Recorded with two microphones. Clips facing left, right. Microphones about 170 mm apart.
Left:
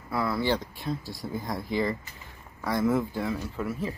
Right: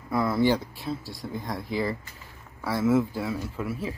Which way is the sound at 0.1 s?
20° right (ahead or behind).